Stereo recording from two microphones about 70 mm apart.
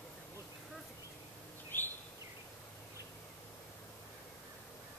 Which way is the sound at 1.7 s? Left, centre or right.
Left.